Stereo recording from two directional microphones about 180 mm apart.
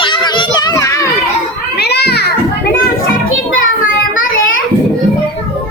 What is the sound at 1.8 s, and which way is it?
Children playing, 65° left (ahead or behind).